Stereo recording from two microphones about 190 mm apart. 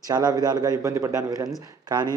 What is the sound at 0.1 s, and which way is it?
A man's voice, 20° right (ahead or behind).